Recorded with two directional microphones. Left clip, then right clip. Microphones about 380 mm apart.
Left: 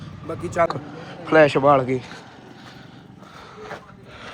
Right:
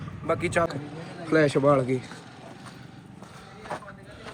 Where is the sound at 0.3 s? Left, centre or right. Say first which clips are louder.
Left 3 dB; centre.